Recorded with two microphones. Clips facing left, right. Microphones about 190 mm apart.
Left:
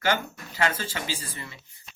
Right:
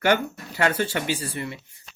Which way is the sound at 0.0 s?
65° right (ahead or behind).